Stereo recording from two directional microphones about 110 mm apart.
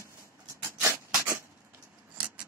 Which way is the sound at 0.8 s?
25° right (ahead or behind).